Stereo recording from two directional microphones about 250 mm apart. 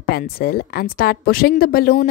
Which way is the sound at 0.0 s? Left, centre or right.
Left.